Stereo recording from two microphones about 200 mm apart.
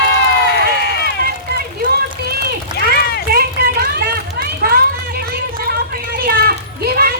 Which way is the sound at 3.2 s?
50° right (ahead or behind).